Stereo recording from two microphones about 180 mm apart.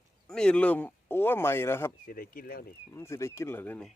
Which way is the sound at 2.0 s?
50° left (ahead or behind).